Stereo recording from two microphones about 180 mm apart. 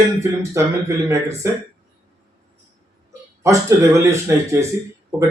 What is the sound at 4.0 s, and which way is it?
Speech, 15° right (ahead or behind).